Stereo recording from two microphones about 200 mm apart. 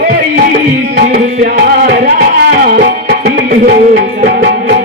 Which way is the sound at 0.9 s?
50° right (ahead or behind).